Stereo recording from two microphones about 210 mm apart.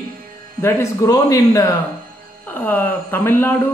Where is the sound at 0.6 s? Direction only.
15° left (ahead or behind).